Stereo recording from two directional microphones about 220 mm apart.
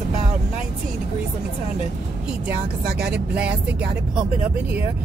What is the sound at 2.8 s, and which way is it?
Speech, 45° right (ahead or behind).